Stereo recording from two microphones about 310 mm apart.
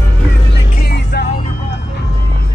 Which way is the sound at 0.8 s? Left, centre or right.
Left.